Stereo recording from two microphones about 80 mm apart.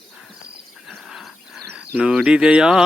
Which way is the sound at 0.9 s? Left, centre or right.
Centre.